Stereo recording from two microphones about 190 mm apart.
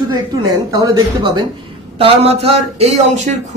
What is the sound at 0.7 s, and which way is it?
A man's voice, 20° right (ahead or behind).